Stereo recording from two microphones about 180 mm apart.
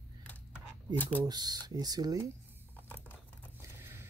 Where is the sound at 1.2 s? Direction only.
20° right (ahead or behind).